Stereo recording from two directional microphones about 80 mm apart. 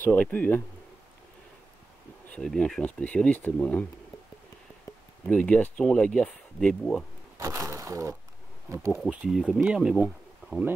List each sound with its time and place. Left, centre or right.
0.0 s speech: left
2.3 s speech: centre
5.2 s speech: centre
7.3 s speech: right
9.1 s speech: centre